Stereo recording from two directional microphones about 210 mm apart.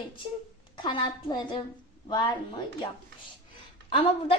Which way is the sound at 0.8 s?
25° left (ahead or behind).